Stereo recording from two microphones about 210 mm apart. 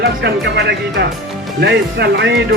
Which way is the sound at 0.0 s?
55° right (ahead or behind).